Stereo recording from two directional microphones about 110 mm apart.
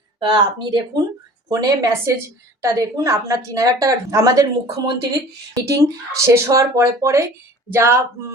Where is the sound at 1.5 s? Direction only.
30° right (ahead or behind).